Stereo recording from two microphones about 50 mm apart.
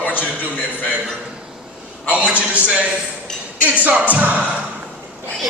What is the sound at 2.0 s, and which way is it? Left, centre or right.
Speech, right.